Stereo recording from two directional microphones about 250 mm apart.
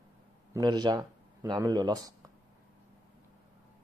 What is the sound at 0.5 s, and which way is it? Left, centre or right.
Speech, centre.